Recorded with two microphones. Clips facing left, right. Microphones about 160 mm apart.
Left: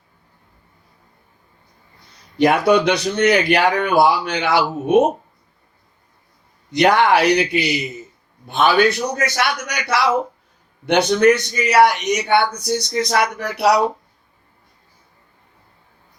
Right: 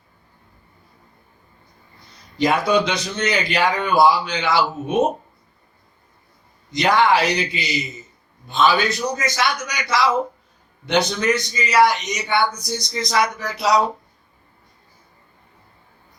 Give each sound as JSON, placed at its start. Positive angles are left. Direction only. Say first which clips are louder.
{"t": 2.4, "sound": "a man's voice", "louder": "left 4 dB", "side_deg": 60}
{"t": 6.7, "sound": "a man's voice", "louder": "left 3 dB", "side_deg": 60}